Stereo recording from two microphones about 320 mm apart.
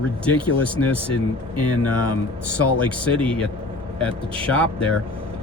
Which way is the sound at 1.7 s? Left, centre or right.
Left.